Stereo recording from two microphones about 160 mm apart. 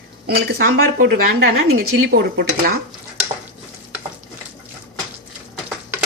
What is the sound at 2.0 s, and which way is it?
Speech, 80° right.